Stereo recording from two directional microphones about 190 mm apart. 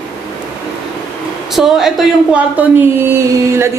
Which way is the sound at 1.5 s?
Centre (ahead or behind).